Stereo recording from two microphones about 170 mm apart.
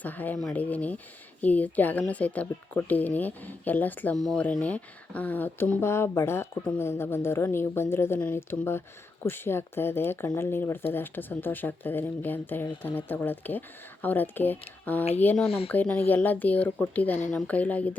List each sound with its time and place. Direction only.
0.0 s speech: 10° left (ahead or behind)